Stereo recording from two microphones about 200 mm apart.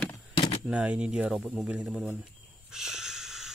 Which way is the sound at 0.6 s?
5° right (ahead or behind).